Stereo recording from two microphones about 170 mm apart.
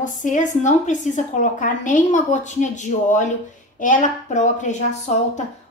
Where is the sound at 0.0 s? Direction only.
50° left (ahead or behind).